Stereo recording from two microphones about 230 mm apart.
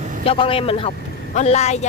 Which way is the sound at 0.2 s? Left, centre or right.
Left.